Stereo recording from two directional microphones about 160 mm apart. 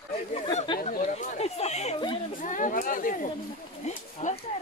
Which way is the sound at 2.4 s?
55° left (ahead or behind).